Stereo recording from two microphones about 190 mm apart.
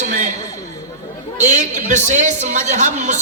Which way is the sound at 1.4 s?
40° right (ahead or behind).